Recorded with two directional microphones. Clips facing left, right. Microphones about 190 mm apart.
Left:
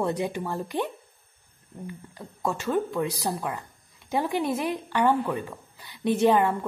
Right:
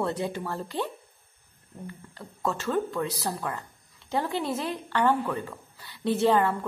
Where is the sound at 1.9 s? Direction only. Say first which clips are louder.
Left 3 dB; 15° left (ahead or behind).